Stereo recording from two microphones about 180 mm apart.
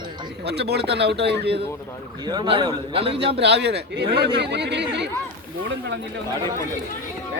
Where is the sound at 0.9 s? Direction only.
70° right (ahead or behind).